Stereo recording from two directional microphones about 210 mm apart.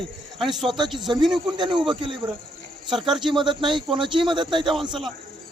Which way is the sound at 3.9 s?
25° right (ahead or behind).